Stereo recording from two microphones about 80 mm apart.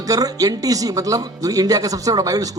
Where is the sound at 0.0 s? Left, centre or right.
Right.